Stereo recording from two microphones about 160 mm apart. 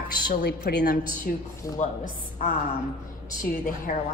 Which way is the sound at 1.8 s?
50° left (ahead or behind).